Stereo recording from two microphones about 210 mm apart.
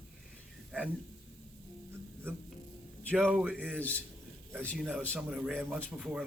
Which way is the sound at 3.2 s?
5° right (ahead or behind).